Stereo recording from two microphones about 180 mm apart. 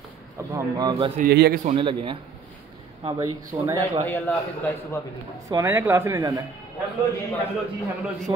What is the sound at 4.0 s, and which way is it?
Speech, 10° left (ahead or behind).